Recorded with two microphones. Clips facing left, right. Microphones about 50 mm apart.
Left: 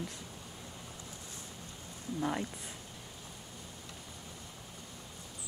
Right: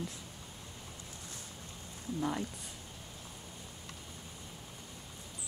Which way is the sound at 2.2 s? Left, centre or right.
Centre.